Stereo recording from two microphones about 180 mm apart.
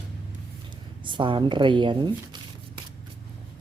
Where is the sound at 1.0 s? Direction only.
25° right (ahead or behind).